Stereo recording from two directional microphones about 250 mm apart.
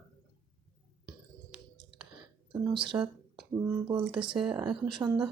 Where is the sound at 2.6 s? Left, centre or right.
Centre.